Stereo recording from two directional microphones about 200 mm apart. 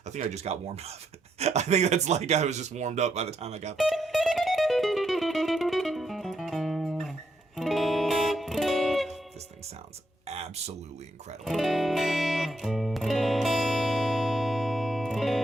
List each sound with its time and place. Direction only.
0.1 s speech: 35° right (ahead or behind)
3.8 s music: centre (ahead or behind)
10.2 s a sound: 30° right (ahead or behind)
11.4 s music: centre (ahead or behind)